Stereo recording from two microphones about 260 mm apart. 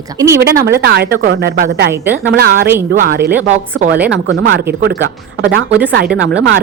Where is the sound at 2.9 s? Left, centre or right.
Right.